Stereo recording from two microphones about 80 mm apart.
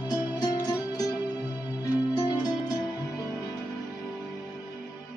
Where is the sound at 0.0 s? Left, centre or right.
Left.